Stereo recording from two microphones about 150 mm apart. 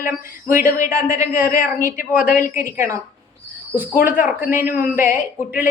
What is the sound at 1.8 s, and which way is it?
Speech, 65° left (ahead or behind).